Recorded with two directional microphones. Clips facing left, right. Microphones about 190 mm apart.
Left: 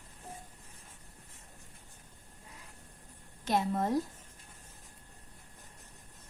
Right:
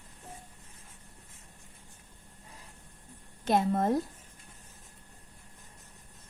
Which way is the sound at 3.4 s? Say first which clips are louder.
Right 4 dB; 50° right (ahead or behind).